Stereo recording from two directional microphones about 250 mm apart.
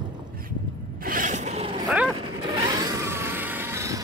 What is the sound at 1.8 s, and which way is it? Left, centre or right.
Dog, centre.